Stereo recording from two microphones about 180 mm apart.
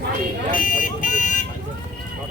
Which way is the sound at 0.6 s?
45° left (ahead or behind).